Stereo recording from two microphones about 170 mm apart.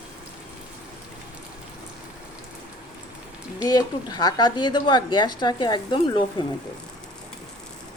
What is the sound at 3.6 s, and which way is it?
A woman's voice, 20° left (ahead or behind).